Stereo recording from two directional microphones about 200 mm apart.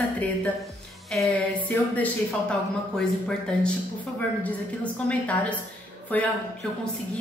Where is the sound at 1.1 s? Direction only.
5° left (ahead or behind).